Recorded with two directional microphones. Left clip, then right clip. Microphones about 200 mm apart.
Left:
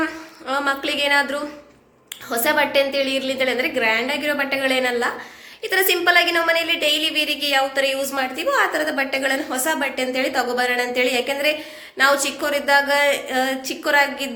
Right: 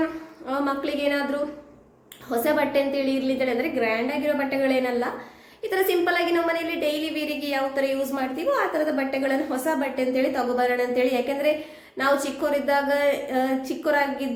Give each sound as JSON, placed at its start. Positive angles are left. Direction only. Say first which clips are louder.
{"t": 0.4, "sound": "a woman's voice", "louder": "left 5 dB", "side_deg": -5}